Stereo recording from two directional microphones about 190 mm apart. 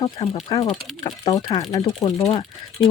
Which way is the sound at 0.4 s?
15° left (ahead or behind).